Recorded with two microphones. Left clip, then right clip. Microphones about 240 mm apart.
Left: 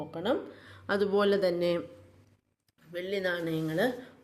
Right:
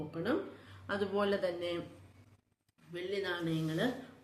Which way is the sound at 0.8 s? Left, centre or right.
Left.